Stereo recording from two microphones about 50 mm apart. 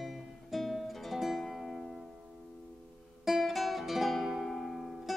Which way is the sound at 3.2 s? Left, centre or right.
Centre.